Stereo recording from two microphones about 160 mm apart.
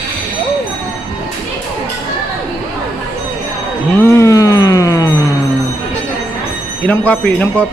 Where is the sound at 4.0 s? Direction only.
15° left (ahead or behind).